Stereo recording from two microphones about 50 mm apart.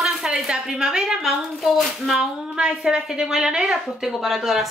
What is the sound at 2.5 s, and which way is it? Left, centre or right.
A woman's voice, centre.